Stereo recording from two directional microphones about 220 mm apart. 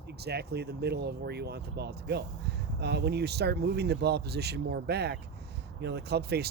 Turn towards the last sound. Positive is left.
turn(degrees=-45)  # may be behind; listen again after turning